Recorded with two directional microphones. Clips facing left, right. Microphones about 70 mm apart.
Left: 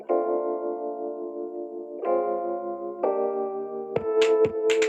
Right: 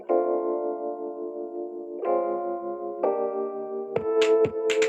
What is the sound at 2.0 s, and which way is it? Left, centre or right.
Electric piano, centre.